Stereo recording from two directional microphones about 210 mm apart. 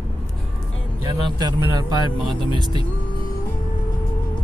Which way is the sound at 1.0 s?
20° right (ahead or behind).